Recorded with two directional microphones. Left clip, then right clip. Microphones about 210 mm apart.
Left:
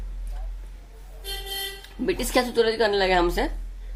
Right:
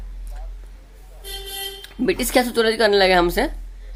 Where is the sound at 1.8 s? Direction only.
30° right (ahead or behind).